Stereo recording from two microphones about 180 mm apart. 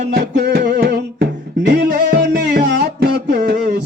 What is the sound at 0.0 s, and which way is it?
Music, 70° right (ahead or behind).